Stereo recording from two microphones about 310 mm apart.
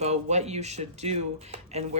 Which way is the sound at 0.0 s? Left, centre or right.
Right.